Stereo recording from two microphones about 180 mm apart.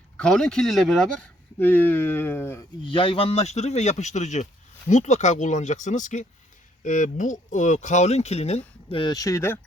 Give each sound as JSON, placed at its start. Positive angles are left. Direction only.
{"t": 0.2, "sound": "speech", "side_deg": 5}
{"t": 2.8, "sound": "speech", "side_deg": 30}